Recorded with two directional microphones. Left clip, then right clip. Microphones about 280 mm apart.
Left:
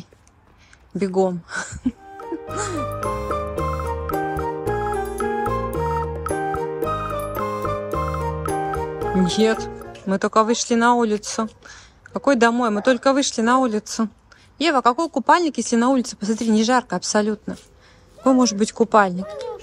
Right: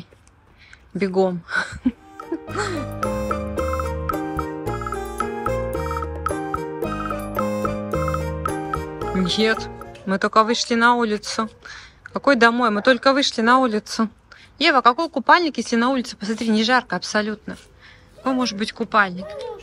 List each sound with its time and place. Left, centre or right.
0.9 s music: centre
9.2 s speech: centre
19.2 s speech: centre